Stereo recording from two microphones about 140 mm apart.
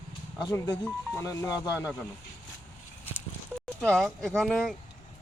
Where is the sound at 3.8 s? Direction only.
5° left (ahead or behind).